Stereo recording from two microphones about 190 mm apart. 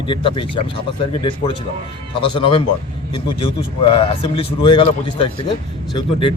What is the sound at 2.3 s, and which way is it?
A man's voice, 25° left (ahead or behind).